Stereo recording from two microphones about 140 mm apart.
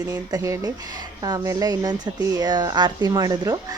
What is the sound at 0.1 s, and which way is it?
A woman's voice, 25° right (ahead or behind).